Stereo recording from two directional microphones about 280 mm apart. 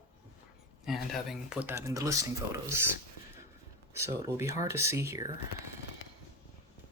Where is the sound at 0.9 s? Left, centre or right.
Centre.